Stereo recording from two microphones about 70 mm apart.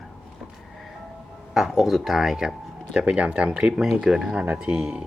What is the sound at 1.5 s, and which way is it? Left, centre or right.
Speech, centre.